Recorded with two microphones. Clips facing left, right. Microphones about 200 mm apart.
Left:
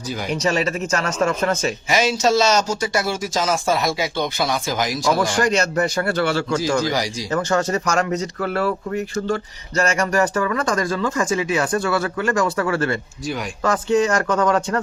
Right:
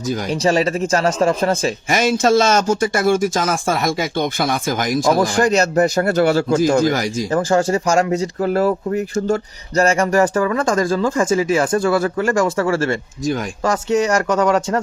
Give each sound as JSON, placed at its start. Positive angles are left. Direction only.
{"t": 0.1, "sound": "speech", "side_deg": -45}
{"t": 0.3, "sound": "speech", "side_deg": -35}
{"t": 1.9, "sound": "speech", "side_deg": -50}
{"t": 5.2, "sound": "speech", "side_deg": -35}
{"t": 7.3, "sound": "speech", "side_deg": -30}
{"t": 14.3, "sound": "speech", "side_deg": -25}